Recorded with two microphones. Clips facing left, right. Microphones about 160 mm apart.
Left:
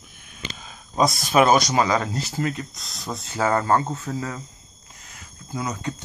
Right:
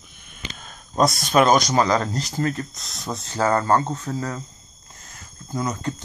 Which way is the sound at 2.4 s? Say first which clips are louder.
Right 2 dB; 40° right (ahead or behind).